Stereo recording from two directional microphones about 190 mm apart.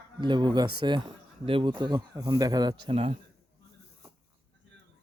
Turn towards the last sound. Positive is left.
turn(degrees=-30)  # may be behind; listen again after turning